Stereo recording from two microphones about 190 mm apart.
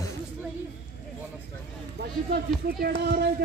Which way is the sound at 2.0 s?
60° right (ahead or behind).